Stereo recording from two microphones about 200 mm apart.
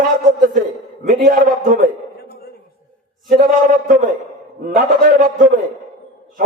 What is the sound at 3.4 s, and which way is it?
A man's voice, 45° right (ahead or behind).